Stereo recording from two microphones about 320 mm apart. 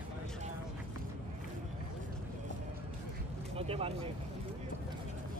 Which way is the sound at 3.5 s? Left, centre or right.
Centre.